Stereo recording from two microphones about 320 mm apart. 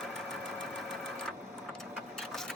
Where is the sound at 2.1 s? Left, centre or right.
Centre.